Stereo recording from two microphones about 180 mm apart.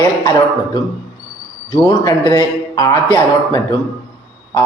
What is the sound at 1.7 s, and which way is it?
A man's voice, 20° left (ahead or behind).